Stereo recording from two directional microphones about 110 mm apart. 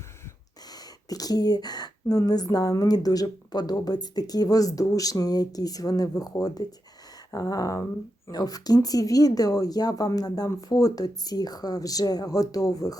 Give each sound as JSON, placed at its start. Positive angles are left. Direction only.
{"t": 1.1, "sound": "speech", "side_deg": 35}